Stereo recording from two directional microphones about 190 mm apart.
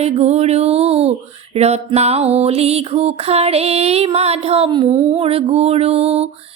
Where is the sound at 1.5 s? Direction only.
35° right (ahead or behind).